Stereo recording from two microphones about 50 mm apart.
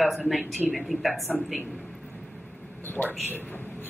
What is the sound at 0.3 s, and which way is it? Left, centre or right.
A woman's voice, centre.